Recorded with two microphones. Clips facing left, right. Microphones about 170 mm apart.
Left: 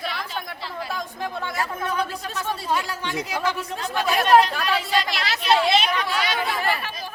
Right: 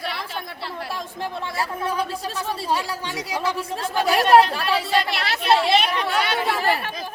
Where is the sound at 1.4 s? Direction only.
30° right (ahead or behind).